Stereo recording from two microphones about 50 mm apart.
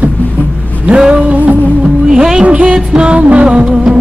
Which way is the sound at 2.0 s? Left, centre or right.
Centre.